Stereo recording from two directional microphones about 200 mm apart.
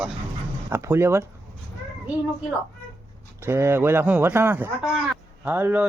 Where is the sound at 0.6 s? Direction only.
15° right (ahead or behind).